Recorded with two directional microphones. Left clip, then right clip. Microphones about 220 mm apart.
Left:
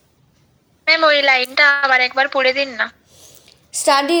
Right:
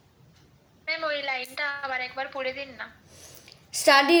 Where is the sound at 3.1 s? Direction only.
15° left (ahead or behind).